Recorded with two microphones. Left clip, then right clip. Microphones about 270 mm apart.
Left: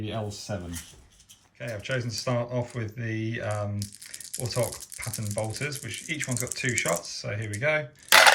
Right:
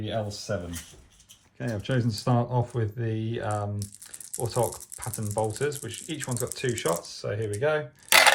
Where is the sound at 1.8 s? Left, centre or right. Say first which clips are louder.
Even; right.